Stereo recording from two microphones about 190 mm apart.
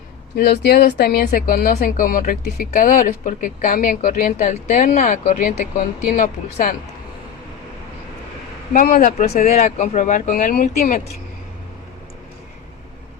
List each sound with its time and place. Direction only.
0.3 s speech: 55° left (ahead or behind); by 5.5 s 40° left (ahead or behind)
5.5 s speech: 50° left (ahead or behind)
8.7 s speech: 45° left (ahead or behind)